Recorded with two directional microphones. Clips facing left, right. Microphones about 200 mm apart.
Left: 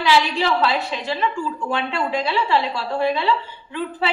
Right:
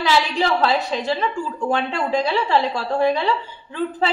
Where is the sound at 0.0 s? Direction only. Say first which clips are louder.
Left 1 dB; 40° right (ahead or behind).